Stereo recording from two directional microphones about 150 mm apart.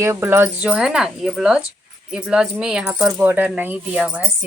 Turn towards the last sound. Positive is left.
turn(degrees=-10)  # may be behind; listen again after turning